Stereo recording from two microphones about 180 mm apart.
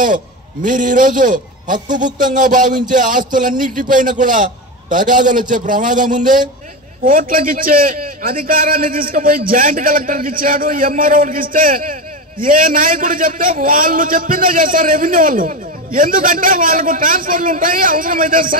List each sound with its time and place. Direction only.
0.0 s a man's voice: 50° right (ahead or behind)